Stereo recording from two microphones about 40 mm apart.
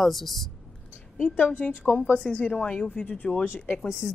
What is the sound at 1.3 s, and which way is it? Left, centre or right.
Speech, left.